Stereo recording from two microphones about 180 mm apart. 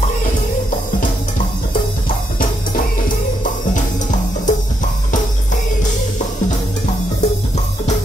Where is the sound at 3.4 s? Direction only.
45° left (ahead or behind).